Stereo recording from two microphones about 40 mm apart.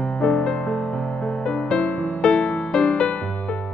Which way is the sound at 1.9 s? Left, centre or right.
Left.